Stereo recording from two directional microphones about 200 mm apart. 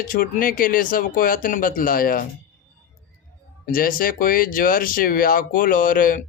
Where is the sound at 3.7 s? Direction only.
45° left (ahead or behind).